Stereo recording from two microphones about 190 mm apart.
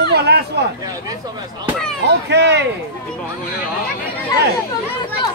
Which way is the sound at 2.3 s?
65° right (ahead or behind).